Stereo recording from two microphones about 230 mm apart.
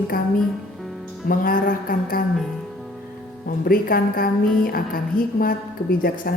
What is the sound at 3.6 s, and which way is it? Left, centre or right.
A woman's voice, left.